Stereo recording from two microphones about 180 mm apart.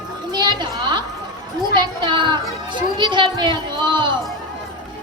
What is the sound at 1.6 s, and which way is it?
A child's voice, 25° right (ahead or behind).